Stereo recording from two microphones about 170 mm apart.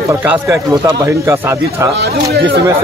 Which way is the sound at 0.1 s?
10° right (ahead or behind).